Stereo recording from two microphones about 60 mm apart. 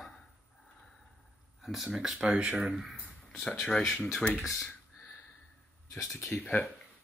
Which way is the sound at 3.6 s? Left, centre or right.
Centre.